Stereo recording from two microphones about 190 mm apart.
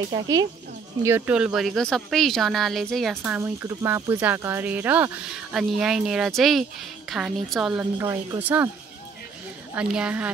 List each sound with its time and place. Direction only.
0.1 s speech: 20° right (ahead or behind)
1.0 s speech: 10° right (ahead or behind)
3.2 s speech: 10° right (ahead or behind)
9.8 s speech: 5° right (ahead or behind)